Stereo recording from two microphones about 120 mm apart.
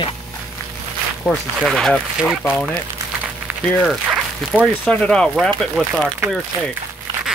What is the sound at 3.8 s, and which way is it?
Speech, centre (ahead or behind).